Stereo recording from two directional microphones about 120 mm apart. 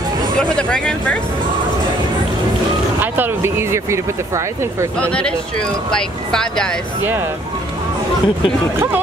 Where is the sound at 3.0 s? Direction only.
15° right (ahead or behind).